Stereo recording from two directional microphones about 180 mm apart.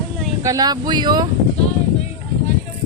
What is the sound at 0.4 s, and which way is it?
Speech, 20° right (ahead or behind).